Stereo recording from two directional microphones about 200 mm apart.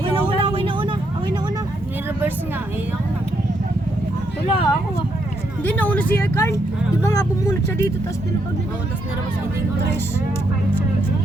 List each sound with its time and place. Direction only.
0.3 s vehicle: 25° right (ahead or behind)
4.4 s a sound: 25° left (ahead or behind)
5.6 s vehicle: 10° left (ahead or behind)
7.0 s speech: 15° left (ahead or behind)